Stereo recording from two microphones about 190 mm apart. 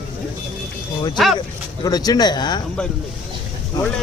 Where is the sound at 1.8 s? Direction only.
20° left (ahead or behind).